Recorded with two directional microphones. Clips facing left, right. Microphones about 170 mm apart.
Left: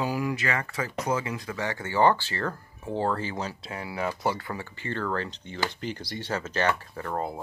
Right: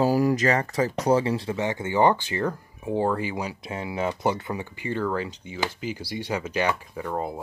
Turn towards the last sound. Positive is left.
turn(degrees=-5)  # may be behind; listen again after turning